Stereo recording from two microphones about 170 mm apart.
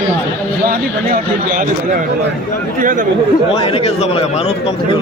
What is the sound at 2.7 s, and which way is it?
Speech, 50° right (ahead or behind).